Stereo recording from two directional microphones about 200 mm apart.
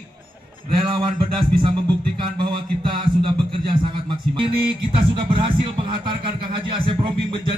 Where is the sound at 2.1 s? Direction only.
25° right (ahead or behind).